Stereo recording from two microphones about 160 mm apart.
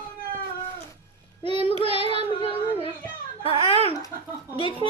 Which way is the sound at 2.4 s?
35° left (ahead or behind).